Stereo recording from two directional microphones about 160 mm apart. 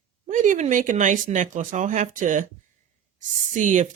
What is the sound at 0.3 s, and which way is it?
Speech, 50° right (ahead or behind).